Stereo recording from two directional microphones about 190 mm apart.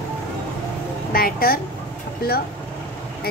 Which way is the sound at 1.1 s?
50° left (ahead or behind).